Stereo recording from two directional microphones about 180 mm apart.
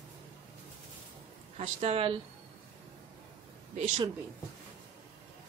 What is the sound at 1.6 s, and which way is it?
Speech, 35° right (ahead or behind).